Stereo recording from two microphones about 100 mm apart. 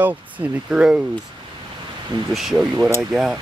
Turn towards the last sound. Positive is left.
turn(degrees=-5)  # may be behind; listen again after turning